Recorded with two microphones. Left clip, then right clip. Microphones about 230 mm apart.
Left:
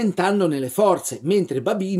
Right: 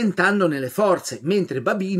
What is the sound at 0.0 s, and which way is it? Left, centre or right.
Speech, centre.